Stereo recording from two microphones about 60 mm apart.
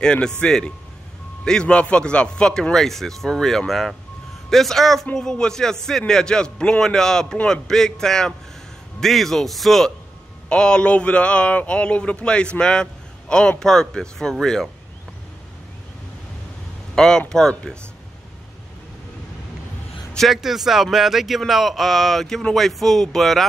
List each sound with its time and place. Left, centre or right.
0.0 s speech: centre
10.5 s a man's voice: centre
16.9 s speech: centre
20.3 s speech: centre